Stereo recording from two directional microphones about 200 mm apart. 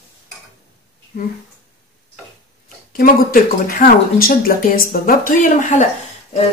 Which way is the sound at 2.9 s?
45° left (ahead or behind).